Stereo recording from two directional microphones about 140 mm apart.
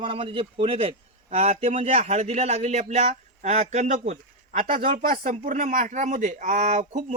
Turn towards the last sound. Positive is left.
turn(degrees=-55)  # may be behind; listen again after turning